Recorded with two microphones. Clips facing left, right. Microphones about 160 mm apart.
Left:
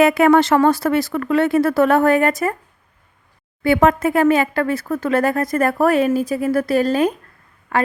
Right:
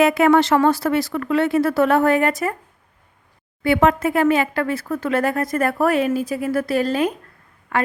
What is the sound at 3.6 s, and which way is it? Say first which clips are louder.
Speech: left 2 dB; 45° left (ahead or behind).